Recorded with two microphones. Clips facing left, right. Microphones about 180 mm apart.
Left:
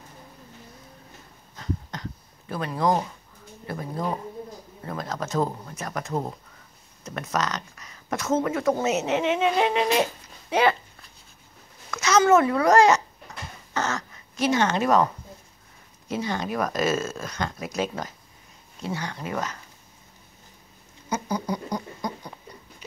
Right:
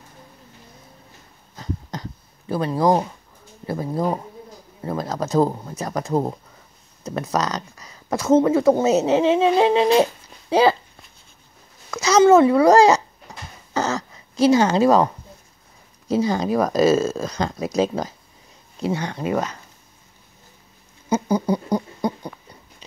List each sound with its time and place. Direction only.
1.6 s a sound: 35° right (ahead or behind)
3.6 s speech: 30° right (ahead or behind)
11.9 s speech: 30° right (ahead or behind)
13.7 s throat clearing: 35° right (ahead or behind)
16.1 s speech: 35° right (ahead or behind)
18.8 s speech: 20° right (ahead or behind)
21.1 s rodents: 30° right (ahead or behind)